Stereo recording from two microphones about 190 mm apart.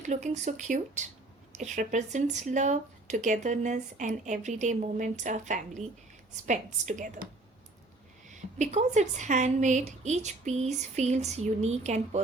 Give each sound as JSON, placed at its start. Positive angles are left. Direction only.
{"t": 0.0, "sound": "a woman's voice", "side_deg": -40}
{"t": 8.3, "sound": "speech", "side_deg": -40}